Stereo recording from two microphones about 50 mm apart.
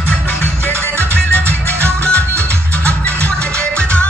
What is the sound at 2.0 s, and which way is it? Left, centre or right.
Music, left.